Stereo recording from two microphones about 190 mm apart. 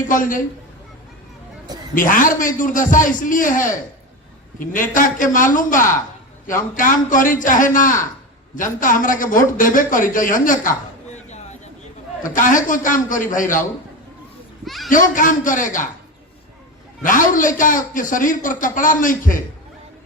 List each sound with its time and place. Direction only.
0.1 s a man's voice: 45° left (ahead or behind)
2.0 s a man's voice: 45° left (ahead or behind)
11.1 s a sound: 35° left (ahead or behind)
12.2 s a man's voice: 45° left (ahead or behind)
14.6 s children playing: centre (ahead or behind)
14.8 s a man's voice: 45° left (ahead or behind)
17.0 s a man's voice: 45° left (ahead or behind)